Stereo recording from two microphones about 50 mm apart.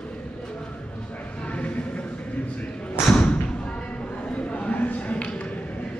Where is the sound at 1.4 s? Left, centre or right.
Left.